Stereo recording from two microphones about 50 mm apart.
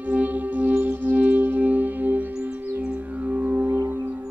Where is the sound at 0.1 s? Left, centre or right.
Right.